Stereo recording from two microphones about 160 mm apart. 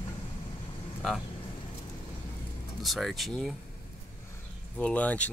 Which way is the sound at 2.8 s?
Centre (ahead or behind).